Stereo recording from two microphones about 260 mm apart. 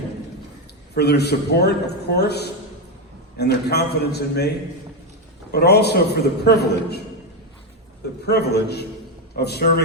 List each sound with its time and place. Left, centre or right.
0.9 s a man's voice: left
8.3 s a man's voice: left